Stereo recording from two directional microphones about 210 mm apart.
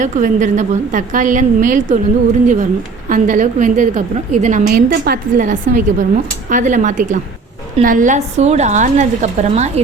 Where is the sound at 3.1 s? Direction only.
40° right (ahead or behind).